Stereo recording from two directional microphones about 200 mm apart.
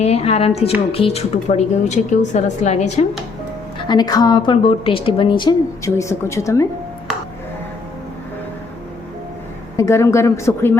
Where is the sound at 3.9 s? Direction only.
20° left (ahead or behind).